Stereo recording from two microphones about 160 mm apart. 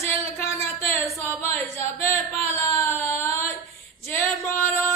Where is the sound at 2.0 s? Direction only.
10° left (ahead or behind).